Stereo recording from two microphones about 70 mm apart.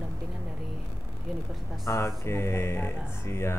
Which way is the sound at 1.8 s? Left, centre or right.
Left.